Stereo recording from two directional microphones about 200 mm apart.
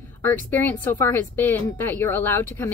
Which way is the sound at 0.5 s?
10° left (ahead or behind).